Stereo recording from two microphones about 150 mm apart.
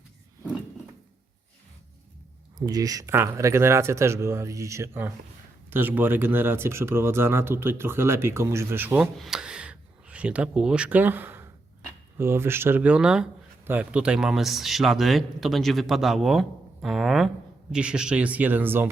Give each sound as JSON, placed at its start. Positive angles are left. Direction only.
{"t": 2.6, "sound": "speech", "side_deg": -25}
{"t": 9.1, "sound": "speech", "side_deg": 0}